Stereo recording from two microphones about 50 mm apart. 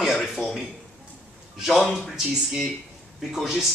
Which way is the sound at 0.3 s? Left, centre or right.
Centre.